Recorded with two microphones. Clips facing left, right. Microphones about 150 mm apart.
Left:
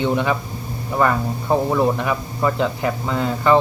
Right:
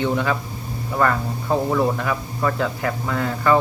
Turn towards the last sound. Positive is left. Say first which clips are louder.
# left 2 dB
turn(degrees=20)  # may be behind; listen again after turning